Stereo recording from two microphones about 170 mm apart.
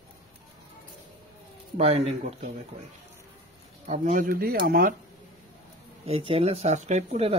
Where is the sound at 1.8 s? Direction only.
40° right (ahead or behind).